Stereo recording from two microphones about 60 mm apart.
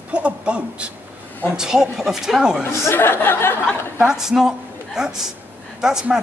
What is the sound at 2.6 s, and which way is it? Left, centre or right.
Speech, left.